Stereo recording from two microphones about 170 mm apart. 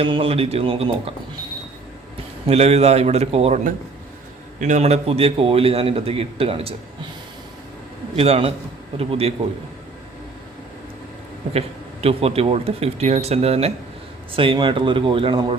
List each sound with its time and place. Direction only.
0.0 s a man's voice: 30° right (ahead or behind)
2.5 s a man's voice: 40° right (ahead or behind)
8.1 s a man's voice: 35° right (ahead or behind)
12.0 s a man's voice: 35° right (ahead or behind)